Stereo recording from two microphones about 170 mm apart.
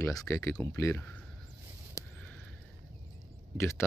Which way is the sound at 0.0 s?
15° left (ahead or behind).